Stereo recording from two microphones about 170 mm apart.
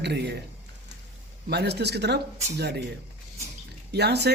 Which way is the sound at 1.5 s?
75° right (ahead or behind).